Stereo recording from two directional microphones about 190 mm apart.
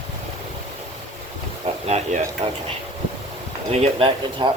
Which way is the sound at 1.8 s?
35° right (ahead or behind).